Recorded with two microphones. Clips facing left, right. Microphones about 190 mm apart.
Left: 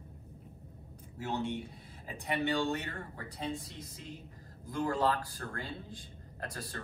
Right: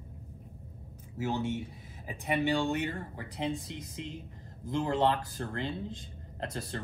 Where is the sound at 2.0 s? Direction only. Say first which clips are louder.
Right 4 dB; 15° right (ahead or behind).